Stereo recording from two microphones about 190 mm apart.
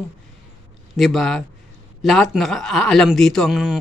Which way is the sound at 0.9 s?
Centre (ahead or behind).